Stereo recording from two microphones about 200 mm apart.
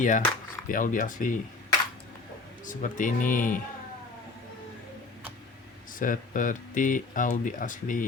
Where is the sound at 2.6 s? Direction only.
40° left (ahead or behind).